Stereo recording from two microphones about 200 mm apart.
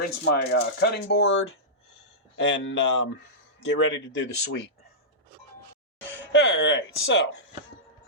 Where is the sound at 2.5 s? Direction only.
60° left (ahead or behind).